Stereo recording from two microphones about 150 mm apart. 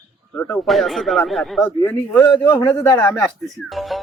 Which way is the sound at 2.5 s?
35° left (ahead or behind).